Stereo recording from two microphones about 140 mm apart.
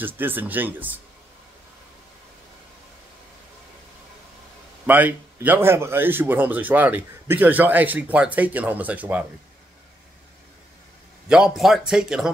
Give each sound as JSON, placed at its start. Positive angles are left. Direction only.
{"t": 0.0, "sound": "speech", "side_deg": -15}
{"t": 4.8, "sound": "speech", "side_deg": -10}
{"t": 11.2, "sound": "speech", "side_deg": -5}